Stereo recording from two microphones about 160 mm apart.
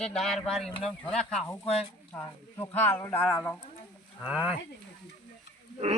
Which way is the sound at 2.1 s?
15° left (ahead or behind).